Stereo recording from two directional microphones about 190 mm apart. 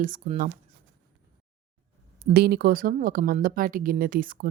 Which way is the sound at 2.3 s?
55° right (ahead or behind).